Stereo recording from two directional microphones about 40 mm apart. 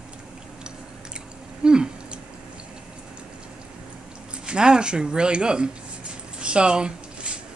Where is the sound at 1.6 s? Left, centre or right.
Right.